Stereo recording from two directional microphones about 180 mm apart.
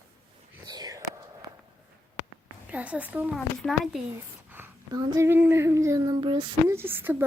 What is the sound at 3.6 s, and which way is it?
Speech, centre (ahead or behind).